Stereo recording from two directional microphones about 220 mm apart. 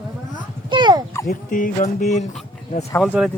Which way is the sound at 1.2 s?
40° left (ahead or behind).